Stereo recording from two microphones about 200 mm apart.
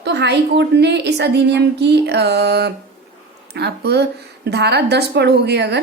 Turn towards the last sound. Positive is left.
turn(degrees=-60)  # may be behind; listen again after turning